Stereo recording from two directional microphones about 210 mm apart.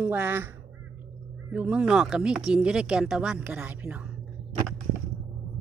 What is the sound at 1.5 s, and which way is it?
Speech, 5° right (ahead or behind).